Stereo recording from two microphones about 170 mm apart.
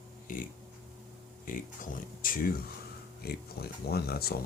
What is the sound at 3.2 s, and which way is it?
Speech, 65° left (ahead or behind).